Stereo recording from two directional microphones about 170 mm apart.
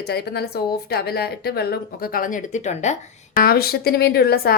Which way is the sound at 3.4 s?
60° left (ahead or behind).